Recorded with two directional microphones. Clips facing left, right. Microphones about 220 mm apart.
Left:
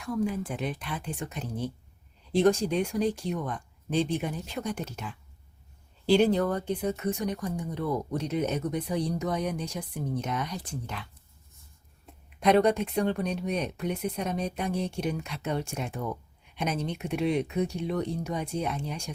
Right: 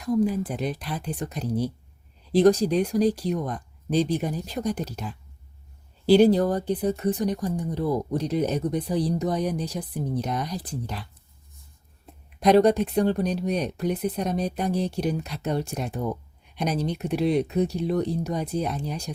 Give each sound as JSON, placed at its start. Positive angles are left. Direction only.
{"t": 0.0, "sound": "speech", "side_deg": -35}
{"t": 12.4, "sound": "speech", "side_deg": -35}